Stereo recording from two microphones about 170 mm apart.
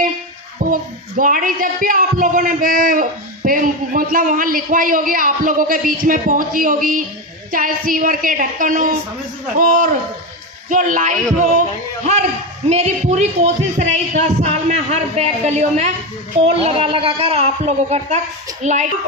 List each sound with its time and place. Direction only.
0.6 s speech: 55° right (ahead or behind)
12.6 s a man's voice: 40° right (ahead or behind)